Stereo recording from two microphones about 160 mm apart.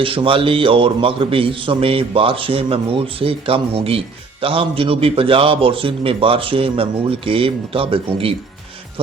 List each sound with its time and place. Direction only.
0.0 s a man's voice: 35° right (ahead or behind)